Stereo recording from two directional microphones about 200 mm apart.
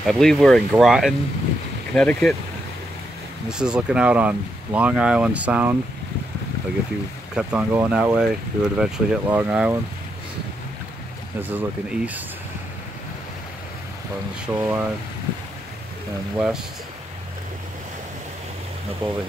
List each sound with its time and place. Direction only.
0.0 s speech: centre (ahead or behind)
3.4 s speech: 5° right (ahead or behind)
7.3 s speech: 10° right (ahead or behind)
11.4 s speech: 10° right (ahead or behind)
14.4 s speech: 5° right (ahead or behind)
16.3 s speech: 5° right (ahead or behind)
19.0 s speech: 20° right (ahead or behind)